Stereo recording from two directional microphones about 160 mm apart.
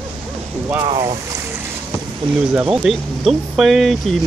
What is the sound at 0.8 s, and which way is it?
Speech, 25° right (ahead or behind).